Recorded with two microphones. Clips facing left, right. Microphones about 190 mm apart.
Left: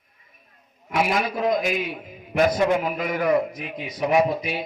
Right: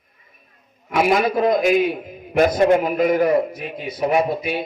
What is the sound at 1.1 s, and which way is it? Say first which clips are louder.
A man's voice: right 7 dB; 50° right (ahead or behind).